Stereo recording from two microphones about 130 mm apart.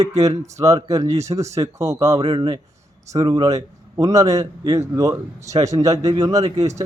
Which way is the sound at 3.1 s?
25° right (ahead or behind).